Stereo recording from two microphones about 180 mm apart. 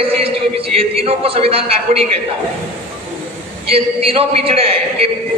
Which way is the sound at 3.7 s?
35° right (ahead or behind).